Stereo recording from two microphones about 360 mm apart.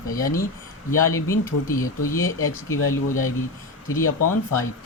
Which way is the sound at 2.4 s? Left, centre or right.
Left.